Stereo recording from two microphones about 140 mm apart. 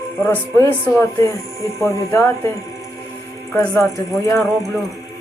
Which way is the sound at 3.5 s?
20° left (ahead or behind).